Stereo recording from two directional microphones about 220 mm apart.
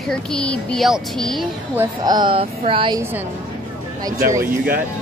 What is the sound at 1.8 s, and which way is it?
A woman's voice, 20° right (ahead or behind).